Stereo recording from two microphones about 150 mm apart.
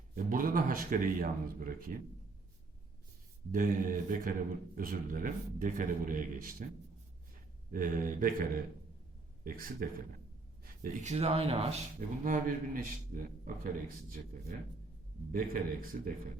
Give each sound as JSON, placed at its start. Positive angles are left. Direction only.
{"t": 0.3, "sound": "speech", "side_deg": -70}
{"t": 3.5, "sound": "speech", "side_deg": -65}
{"t": 7.7, "sound": "speech", "side_deg": -65}
{"t": 11.9, "sound": "speech", "side_deg": -60}